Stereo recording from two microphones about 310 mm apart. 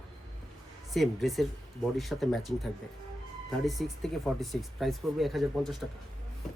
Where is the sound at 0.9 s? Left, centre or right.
Centre.